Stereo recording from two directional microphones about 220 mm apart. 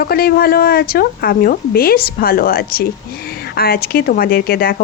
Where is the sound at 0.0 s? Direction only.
45° left (ahead or behind).